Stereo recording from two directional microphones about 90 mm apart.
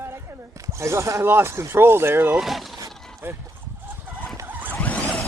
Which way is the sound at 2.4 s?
Centre (ahead or behind).